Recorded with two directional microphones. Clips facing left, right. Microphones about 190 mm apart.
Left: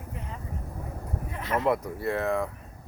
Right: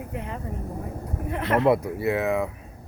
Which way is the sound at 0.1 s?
70° right (ahead or behind).